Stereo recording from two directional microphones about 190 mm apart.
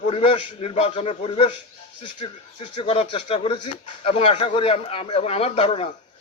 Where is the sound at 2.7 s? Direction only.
30° left (ahead or behind).